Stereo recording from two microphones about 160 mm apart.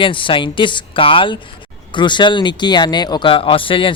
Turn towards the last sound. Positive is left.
turn(degrees=35)  # may be behind; listen again after turning